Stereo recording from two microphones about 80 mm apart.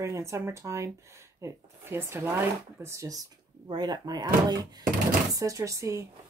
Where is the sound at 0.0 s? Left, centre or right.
Right.